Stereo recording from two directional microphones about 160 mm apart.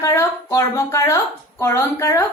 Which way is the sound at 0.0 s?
15° left (ahead or behind).